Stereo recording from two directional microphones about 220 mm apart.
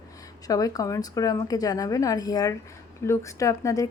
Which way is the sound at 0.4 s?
15° left (ahead or behind).